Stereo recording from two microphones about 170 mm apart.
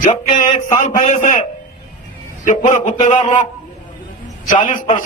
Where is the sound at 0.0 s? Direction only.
50° left (ahead or behind).